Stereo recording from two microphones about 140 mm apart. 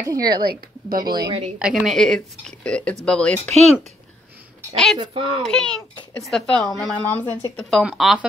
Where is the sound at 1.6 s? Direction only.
5° right (ahead or behind).